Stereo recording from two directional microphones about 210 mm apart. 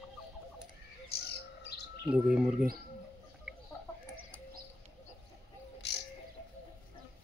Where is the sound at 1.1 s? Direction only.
50° left (ahead or behind).